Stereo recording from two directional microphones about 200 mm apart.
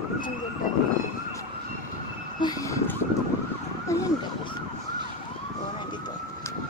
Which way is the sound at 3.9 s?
15° left (ahead or behind).